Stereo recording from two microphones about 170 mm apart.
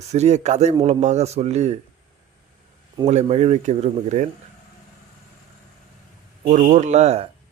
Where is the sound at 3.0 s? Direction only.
40° right (ahead or behind).